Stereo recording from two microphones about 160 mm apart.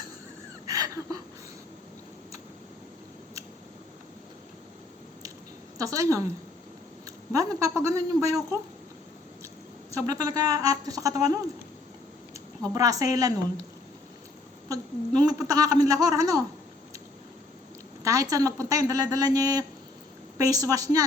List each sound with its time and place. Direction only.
0.7 s a sound: 25° right (ahead or behind)
5.7 s a woman's voice: 20° right (ahead or behind)
7.3 s a man's voice: 20° right (ahead or behind)
9.9 s a man's voice: 20° right (ahead or behind)
12.7 s a man's voice: 20° right (ahead or behind)
15.3 s a man's voice: 20° right (ahead or behind)
18.0 s a man's voice: 20° right (ahead or behind)